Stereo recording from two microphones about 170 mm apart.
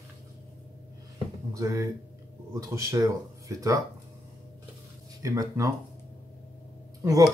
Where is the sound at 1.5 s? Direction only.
20° right (ahead or behind).